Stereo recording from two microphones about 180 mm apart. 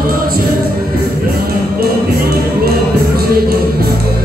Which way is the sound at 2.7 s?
55° right (ahead or behind).